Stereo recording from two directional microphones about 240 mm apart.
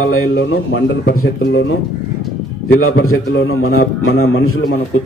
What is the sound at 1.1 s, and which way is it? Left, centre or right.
Speech, left.